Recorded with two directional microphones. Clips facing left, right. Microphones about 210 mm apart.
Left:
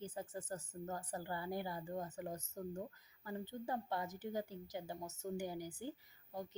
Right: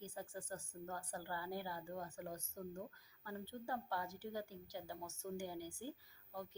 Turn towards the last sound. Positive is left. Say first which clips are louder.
# left 3 dB
turn(degrees=20)  # may be behind; listen again after turning